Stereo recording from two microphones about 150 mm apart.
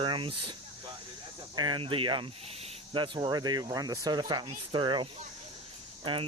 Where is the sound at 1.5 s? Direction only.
30° right (ahead or behind).